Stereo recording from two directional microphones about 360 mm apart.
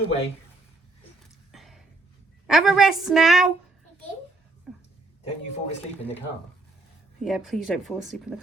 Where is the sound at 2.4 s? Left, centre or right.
Centre.